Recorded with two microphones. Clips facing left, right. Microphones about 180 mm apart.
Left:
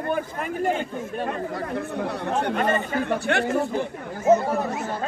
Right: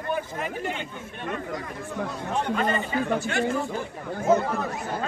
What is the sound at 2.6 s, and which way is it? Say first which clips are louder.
Speech: left 2 dB; 50° left (ahead or behind).